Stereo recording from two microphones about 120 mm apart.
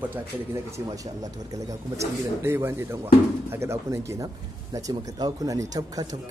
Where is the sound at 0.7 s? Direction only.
30° right (ahead or behind).